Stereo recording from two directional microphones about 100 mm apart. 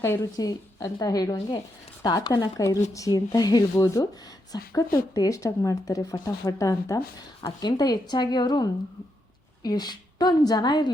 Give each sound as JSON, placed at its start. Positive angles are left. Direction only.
{"t": 0.3, "sound": "a woman's voice", "side_deg": 40}